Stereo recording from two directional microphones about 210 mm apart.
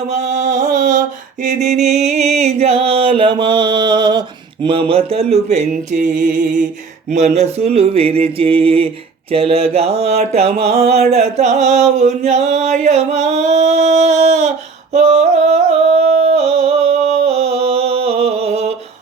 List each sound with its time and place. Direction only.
0.1 s mantra: 35° right (ahead or behind)
7.1 s mantra: 35° right (ahead or behind)
14.9 s music: 30° right (ahead or behind)